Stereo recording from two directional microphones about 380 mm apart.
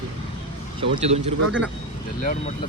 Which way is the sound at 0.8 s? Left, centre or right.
Centre.